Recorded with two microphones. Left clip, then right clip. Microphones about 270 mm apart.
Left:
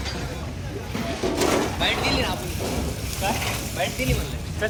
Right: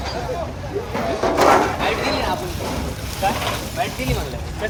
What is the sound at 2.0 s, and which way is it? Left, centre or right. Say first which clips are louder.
Speech: right 3 dB; centre.